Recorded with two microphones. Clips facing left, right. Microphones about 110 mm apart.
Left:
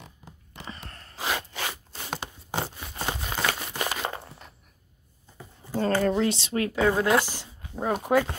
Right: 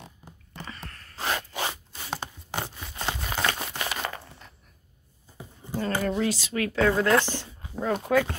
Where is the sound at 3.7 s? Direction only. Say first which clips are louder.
Left 2 dB; 30° left (ahead or behind).